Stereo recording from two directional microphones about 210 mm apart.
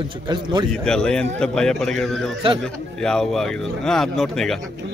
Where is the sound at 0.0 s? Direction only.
20° right (ahead or behind).